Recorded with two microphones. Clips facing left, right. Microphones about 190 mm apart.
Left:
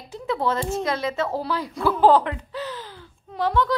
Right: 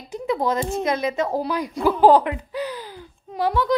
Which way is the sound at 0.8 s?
20° right (ahead or behind).